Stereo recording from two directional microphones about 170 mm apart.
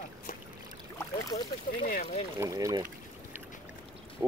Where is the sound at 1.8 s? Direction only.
55° left (ahead or behind).